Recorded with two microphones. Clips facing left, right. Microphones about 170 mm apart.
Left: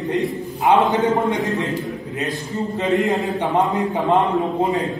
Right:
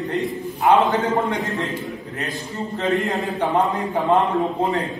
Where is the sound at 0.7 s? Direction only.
20° left (ahead or behind).